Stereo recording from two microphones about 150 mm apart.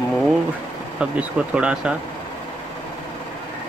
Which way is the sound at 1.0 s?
5° right (ahead or behind).